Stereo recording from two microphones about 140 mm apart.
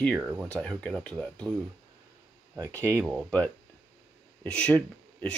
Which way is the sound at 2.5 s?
20° right (ahead or behind).